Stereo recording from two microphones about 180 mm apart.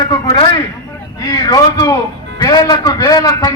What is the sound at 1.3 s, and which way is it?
A man's voice, 20° left (ahead or behind).